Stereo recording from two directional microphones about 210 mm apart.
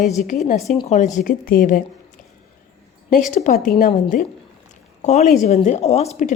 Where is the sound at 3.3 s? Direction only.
35° left (ahead or behind).